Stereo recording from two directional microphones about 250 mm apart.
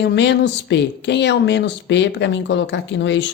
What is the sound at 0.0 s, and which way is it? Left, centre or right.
Speech, left.